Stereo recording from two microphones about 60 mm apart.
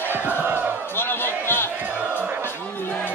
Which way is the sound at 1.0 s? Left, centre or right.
Left.